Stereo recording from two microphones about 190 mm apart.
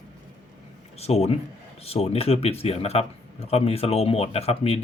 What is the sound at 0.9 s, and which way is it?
Speech, 35° left (ahead or behind).